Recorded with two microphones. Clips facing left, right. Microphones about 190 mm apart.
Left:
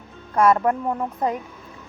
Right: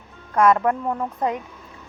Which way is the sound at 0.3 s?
30° left (ahead or behind).